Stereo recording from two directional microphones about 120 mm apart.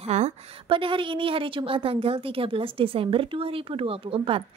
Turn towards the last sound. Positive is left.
turn(degrees=-50)  # may be behind; listen again after turning